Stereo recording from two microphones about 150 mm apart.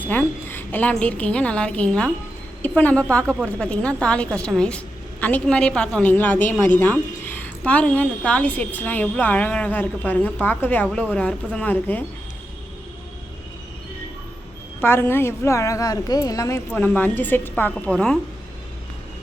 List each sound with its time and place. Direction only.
0.1 s a woman's voice: 15° left (ahead or behind)
14.8 s a woman's voice: 15° left (ahead or behind)
16.7 s a woman's voice: 10° left (ahead or behind)